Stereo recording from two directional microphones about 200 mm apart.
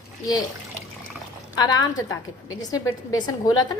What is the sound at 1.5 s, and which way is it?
A woman's voice, 20° left (ahead or behind).